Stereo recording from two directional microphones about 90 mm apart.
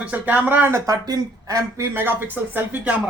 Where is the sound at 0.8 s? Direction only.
45° right (ahead or behind).